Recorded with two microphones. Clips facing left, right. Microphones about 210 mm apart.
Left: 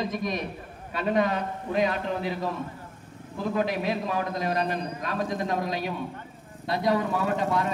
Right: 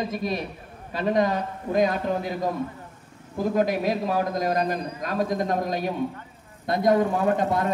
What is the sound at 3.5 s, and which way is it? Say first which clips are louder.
A man's voice: right 3 dB; 40° right (ahead or behind).